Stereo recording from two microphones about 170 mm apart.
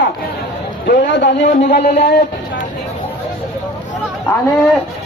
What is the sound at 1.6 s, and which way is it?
Speech, 55° left (ahead or behind).